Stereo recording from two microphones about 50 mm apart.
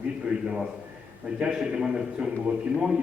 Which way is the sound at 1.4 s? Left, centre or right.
Centre.